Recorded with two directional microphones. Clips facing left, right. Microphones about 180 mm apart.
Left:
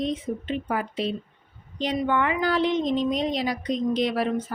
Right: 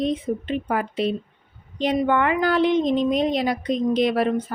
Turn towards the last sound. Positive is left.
turn(degrees=-60)  # may be behind; listen again after turning